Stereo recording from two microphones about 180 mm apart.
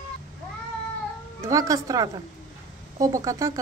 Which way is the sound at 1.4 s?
20° right (ahead or behind).